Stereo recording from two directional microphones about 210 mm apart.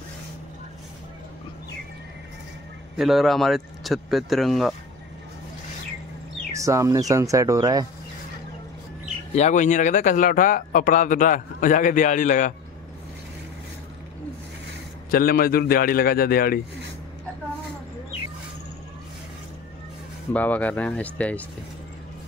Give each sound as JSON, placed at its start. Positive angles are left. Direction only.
{"t": 3.0, "sound": "speech", "side_deg": 0}
{"t": 6.5, "sound": "speech", "side_deg": -15}
{"t": 9.3, "sound": "speech", "side_deg": 35}
{"t": 15.0, "sound": "a man's voice", "side_deg": 45}
{"t": 20.3, "sound": "speech", "side_deg": 5}